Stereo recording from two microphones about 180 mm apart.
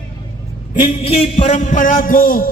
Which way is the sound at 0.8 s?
30° left (ahead or behind).